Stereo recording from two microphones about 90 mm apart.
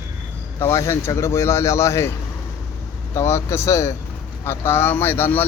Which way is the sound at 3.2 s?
30° left (ahead or behind).